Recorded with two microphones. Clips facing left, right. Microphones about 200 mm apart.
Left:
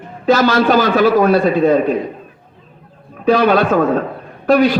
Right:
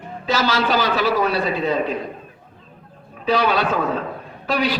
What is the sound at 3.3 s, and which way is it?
A man's voice, 50° left (ahead or behind).